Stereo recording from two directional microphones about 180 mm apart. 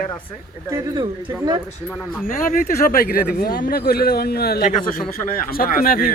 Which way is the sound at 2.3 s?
50° left (ahead or behind).